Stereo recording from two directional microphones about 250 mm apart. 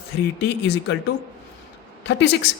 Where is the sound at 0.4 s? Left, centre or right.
Left.